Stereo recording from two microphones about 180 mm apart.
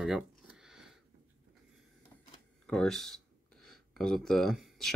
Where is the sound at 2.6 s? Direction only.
5° left (ahead or behind).